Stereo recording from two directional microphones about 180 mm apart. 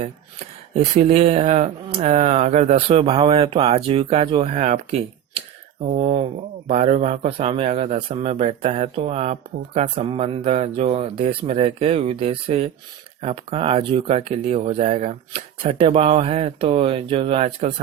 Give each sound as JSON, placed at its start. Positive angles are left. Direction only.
{"t": 0.7, "sound": "a man's voice", "side_deg": -35}